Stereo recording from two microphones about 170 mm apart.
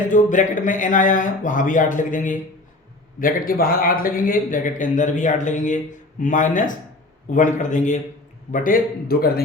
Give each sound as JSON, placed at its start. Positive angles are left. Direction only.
{"t": 0.1, "sound": "a man's voice", "side_deg": 50}